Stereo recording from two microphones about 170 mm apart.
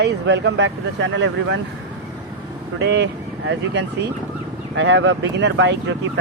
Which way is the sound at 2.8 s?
90° right.